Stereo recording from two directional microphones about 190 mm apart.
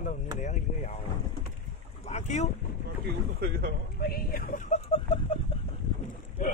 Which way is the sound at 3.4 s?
55° right (ahead or behind).